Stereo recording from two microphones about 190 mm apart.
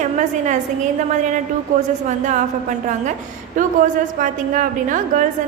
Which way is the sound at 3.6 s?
45° right (ahead or behind).